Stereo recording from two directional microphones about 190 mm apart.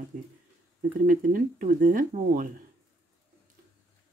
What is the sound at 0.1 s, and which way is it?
Speech, 45° right (ahead or behind).